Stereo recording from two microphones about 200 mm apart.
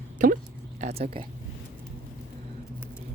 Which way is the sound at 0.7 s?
30° right (ahead or behind).